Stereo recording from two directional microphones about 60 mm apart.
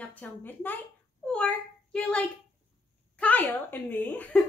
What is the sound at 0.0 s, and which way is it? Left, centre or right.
Speech, left.